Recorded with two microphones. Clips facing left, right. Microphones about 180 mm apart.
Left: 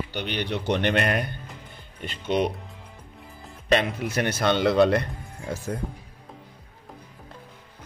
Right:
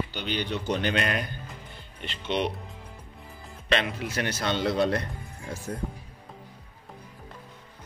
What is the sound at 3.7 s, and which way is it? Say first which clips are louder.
A man's voice: left 4 dB; 50° left (ahead or behind).